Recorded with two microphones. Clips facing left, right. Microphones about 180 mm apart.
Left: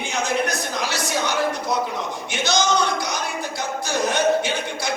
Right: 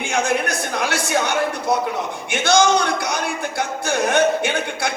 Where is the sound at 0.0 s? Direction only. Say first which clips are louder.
Right 3 dB; 55° right (ahead or behind).